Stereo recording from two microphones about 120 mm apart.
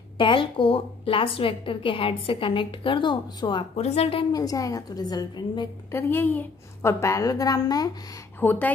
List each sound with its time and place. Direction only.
0.2 s a woman's voice: 45° left (ahead or behind)
3.7 s a woman's voice: 60° left (ahead or behind)
4.3 s a woman's voice: 30° left (ahead or behind)
5.9 s a woman's voice: 20° left (ahead or behind)
8.4 s speech: 15° left (ahead or behind)